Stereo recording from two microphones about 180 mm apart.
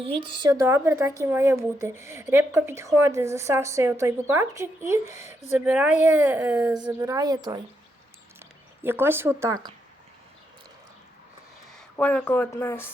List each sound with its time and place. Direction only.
0.0 s a woman's voice: 25° right (ahead or behind)
11.7 s speech: 5° left (ahead or behind)